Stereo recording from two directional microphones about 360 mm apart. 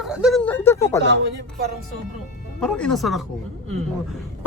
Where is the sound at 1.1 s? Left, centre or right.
Right.